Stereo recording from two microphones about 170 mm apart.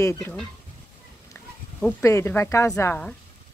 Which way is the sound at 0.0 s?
15° left (ahead or behind).